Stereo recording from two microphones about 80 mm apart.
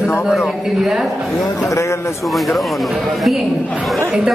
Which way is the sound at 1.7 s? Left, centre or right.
Left.